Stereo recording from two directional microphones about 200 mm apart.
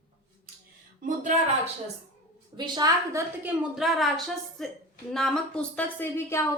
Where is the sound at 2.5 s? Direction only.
20° right (ahead or behind).